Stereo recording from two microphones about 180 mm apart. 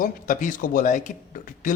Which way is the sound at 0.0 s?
50° left (ahead or behind).